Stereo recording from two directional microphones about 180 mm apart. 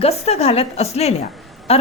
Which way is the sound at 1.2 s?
Centre (ahead or behind).